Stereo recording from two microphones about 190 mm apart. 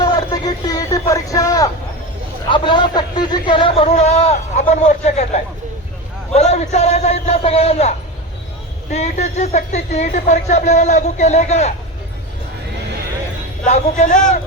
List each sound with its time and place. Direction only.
0.0 s a man's voice: 20° left (ahead or behind); by 11.7 s 35° left (ahead or behind)
13.7 s a man's voice: 35° left (ahead or behind)